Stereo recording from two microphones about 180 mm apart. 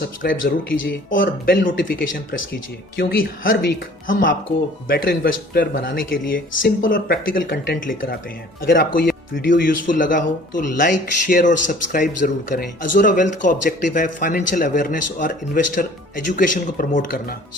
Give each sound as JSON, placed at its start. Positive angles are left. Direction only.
{"t": 0.2, "sound": "speech", "side_deg": 50}
{"t": 2.4, "sound": "speech", "side_deg": 80}
{"t": 3.5, "sound": "a woman's voice", "side_deg": 90}
{"t": 4.9, "sound": "speech", "side_deg": 55}